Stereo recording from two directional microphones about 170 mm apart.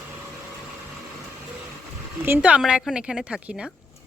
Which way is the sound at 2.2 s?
10° right (ahead or behind).